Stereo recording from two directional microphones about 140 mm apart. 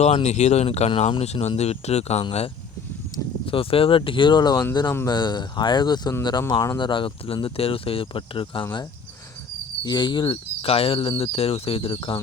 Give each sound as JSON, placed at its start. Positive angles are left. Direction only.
{"t": 0.0, "sound": "speech", "side_deg": 50}
{"t": 3.4, "sound": "speech", "side_deg": 40}
{"t": 9.8, "sound": "speech", "side_deg": 30}